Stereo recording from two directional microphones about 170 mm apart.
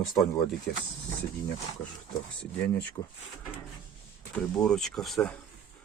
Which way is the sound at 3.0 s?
30° left (ahead or behind).